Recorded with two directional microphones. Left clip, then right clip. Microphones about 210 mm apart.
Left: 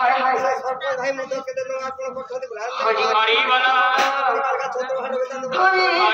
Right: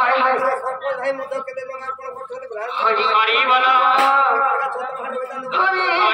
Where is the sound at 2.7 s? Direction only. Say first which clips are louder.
Right 2 dB; 25° right (ahead or behind).